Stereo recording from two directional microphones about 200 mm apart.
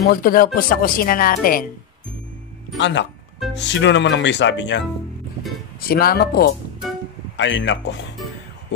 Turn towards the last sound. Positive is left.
turn(degrees=65)  # may be behind; listen again after turning